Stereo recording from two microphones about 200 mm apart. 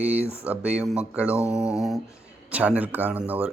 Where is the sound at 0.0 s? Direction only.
10° right (ahead or behind).